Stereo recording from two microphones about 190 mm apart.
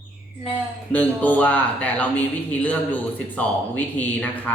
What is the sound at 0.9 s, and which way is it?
Speech, 10° left (ahead or behind).